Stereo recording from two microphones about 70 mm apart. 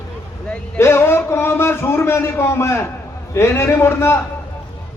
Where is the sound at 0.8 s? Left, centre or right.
Left.